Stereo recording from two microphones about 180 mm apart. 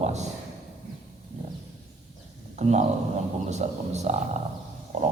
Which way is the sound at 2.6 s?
40° right (ahead or behind).